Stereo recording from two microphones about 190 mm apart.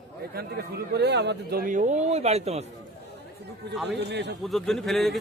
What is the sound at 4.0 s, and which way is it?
Speech, 65° right (ahead or behind).